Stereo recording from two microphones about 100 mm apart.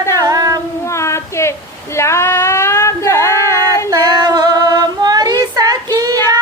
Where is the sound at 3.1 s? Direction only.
35° right (ahead or behind).